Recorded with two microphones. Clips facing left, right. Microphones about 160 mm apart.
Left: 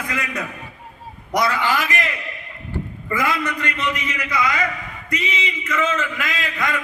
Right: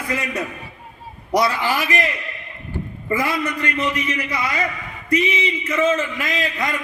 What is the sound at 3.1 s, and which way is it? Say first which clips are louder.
A man's voice: right 1 dB; 30° right (ahead or behind).